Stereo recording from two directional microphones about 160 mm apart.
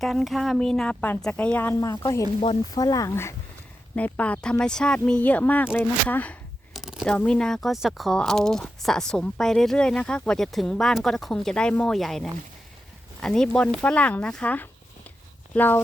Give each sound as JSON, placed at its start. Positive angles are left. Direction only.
{"t": 0.0, "sound": "a woman's voice", "side_deg": 0}
{"t": 3.9, "sound": "a woman's voice", "side_deg": 10}
{"t": 6.7, "sound": "a sound", "side_deg": 0}
{"t": 7.1, "sound": "a woman's voice", "side_deg": 5}